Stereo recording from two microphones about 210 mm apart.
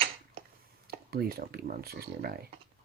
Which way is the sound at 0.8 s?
45° right (ahead or behind).